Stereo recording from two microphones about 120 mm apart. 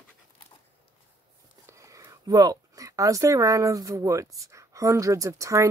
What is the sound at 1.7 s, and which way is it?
Speech, 25° right (ahead or behind).